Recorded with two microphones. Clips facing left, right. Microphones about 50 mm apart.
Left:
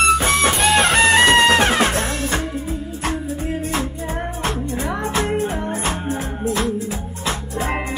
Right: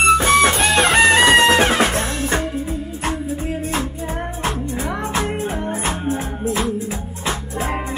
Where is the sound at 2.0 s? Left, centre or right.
Right.